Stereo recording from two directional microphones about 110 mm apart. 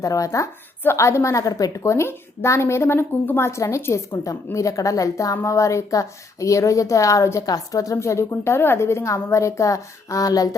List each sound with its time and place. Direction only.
0.0 s a woman's voice: 30° left (ahead or behind)